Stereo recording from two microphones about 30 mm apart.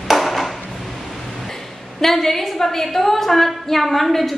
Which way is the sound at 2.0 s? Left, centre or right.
Centre.